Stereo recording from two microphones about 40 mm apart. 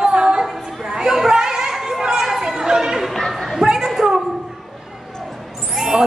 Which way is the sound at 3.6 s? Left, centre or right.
Centre.